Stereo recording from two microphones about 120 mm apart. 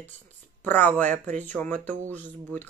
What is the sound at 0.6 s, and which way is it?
Speech, 15° left (ahead or behind).